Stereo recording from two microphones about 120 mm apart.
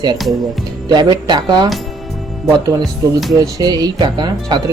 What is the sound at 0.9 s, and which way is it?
Speech, 35° right (ahead or behind).